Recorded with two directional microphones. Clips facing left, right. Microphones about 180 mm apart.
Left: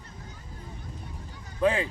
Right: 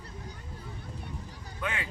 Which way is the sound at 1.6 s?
30° left (ahead or behind).